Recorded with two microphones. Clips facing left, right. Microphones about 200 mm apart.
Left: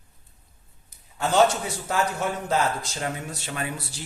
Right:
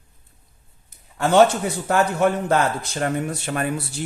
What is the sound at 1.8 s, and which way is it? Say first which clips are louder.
Speech: right 7 dB; 60° right (ahead or behind).